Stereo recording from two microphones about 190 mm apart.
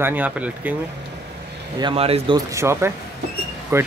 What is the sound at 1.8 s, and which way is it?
Speech, 30° right (ahead or behind).